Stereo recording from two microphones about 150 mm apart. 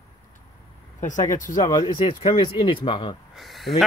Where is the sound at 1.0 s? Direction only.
55° left (ahead or behind).